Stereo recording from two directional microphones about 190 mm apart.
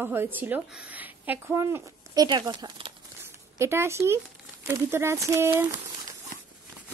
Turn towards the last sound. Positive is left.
turn(degrees=-15)  # may be behind; listen again after turning